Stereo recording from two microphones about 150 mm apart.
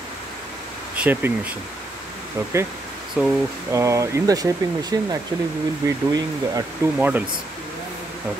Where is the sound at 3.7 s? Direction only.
20° right (ahead or behind).